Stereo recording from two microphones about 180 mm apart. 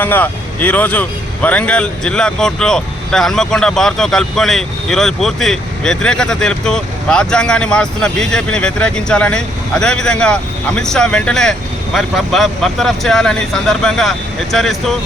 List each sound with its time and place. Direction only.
0.0 s speech: 10° left (ahead or behind)